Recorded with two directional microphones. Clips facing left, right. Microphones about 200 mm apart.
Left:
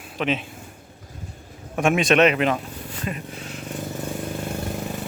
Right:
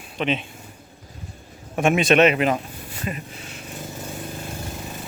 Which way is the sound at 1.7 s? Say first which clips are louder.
Right 1 dB; centre (ahead or behind).